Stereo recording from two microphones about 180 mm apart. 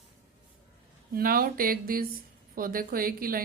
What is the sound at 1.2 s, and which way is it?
Speech, 50° right (ahead or behind).